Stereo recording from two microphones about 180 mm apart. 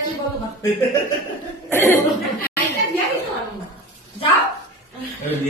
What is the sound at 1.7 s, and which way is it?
Speech, 15° left (ahead or behind).